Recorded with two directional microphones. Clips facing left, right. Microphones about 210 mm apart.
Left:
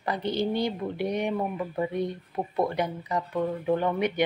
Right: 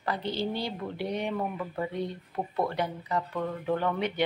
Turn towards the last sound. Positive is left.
turn(degrees=15)  # may be behind; listen again after turning